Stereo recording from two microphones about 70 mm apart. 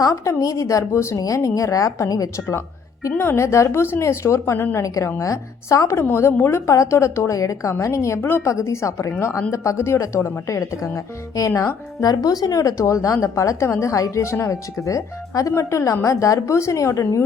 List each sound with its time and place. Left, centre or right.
0.3 s speech: left
3.2 s speech: left
6.3 s speech: left
6.7 s speech: left
8.2 s speech: left
12.0 s speech: left